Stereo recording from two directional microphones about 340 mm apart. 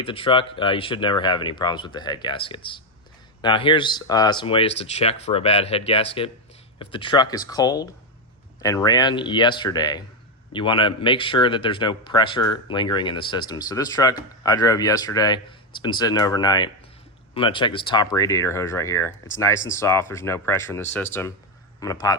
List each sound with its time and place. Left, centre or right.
0.0 s a man's voice: centre